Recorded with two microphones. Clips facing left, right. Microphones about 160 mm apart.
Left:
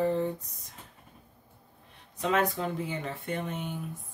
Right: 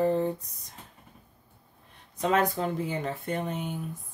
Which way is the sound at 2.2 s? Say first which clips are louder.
Right 2 dB; 40° right (ahead or behind).